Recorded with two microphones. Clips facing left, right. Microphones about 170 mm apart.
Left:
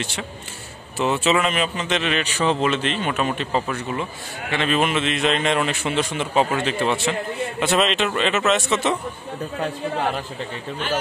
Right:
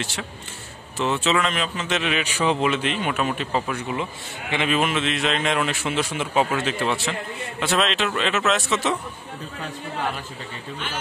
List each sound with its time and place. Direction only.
0.9 s speech: 10° left (ahead or behind)
1.9 s speech: 5° right (ahead or behind)
4.7 s a man's voice: centre (ahead or behind)
9.6 s speech: 50° left (ahead or behind)